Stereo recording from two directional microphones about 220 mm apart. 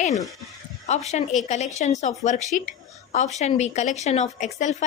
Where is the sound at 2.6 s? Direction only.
35° left (ahead or behind).